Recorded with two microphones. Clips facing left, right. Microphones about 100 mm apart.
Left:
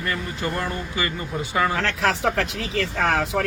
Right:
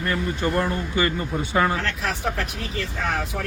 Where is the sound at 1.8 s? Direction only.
90° left.